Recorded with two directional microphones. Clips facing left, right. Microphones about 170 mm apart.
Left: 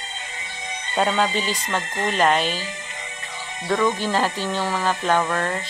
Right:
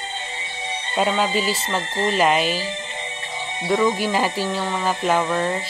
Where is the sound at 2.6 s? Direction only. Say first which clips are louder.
Right 5 dB; 30° right (ahead or behind).